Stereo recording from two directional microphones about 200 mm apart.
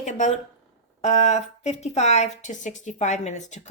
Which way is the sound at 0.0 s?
40° left (ahead or behind).